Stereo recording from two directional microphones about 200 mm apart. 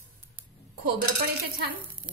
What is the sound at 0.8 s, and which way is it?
Speech, 50° right (ahead or behind).